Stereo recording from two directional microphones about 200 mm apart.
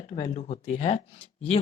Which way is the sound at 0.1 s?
35° left (ahead or behind).